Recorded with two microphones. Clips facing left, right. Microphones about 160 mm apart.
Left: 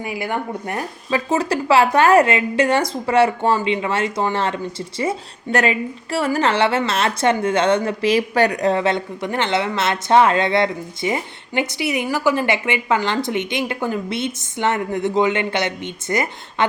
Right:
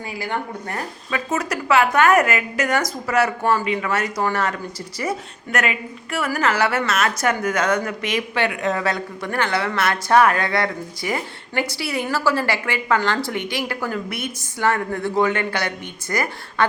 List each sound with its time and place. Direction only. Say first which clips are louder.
0.0 s a woman's voice: left 3 dB; 20° left (ahead or behind)
1.1 s a woman's voice: left 5 dB; 30° left (ahead or behind)